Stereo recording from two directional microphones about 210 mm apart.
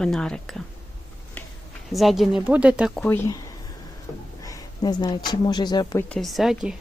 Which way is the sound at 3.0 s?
15° left (ahead or behind).